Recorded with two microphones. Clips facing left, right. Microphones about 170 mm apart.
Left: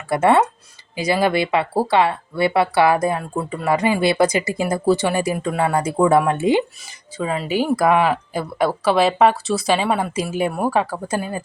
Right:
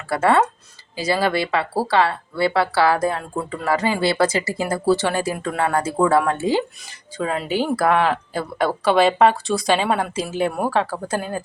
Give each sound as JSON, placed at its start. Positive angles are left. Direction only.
{"t": 0.1, "sound": "speech", "side_deg": 20}
{"t": 7.2, "sound": "speech", "side_deg": 0}